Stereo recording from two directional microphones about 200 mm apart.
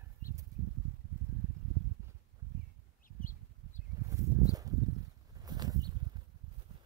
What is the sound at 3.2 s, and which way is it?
Bird, 45° left (ahead or behind).